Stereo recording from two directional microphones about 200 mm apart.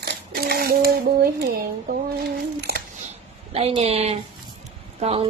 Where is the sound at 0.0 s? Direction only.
50° right (ahead or behind).